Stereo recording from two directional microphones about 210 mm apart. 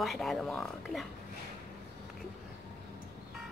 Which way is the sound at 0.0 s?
Centre (ahead or behind).